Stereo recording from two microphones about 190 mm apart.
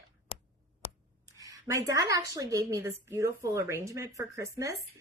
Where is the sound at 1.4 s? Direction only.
15° right (ahead or behind).